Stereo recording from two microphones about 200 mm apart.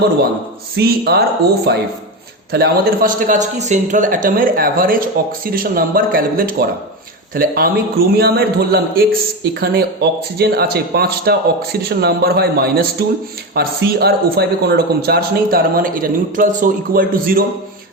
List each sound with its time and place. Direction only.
0.8 s a man's voice: 55° right (ahead or behind)